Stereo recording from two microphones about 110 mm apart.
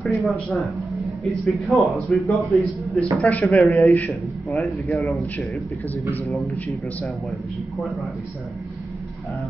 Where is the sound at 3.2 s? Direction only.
15° left (ahead or behind).